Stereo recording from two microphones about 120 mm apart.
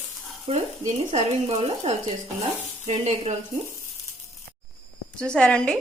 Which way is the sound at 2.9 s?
70° right (ahead or behind).